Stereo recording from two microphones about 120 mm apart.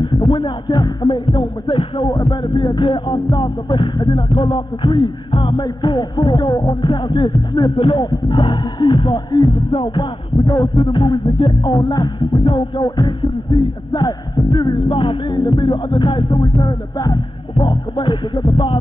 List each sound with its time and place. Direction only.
0.0 s speech: 40° left (ahead or behind)
6.8 s speech: 40° left (ahead or behind)